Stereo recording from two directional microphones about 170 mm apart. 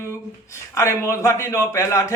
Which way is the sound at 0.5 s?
15° left (ahead or behind).